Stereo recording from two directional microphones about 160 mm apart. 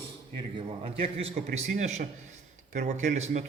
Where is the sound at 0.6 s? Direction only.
35° right (ahead or behind).